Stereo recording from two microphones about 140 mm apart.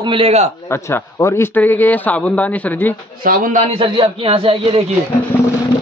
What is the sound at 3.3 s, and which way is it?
Speech, 80° right.